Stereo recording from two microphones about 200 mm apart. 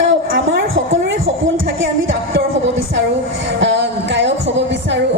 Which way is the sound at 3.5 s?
60° right (ahead or behind).